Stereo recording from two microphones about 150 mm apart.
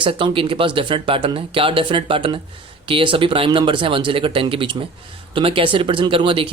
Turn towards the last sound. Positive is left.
turn(degrees=-35)  # may be behind; listen again after turning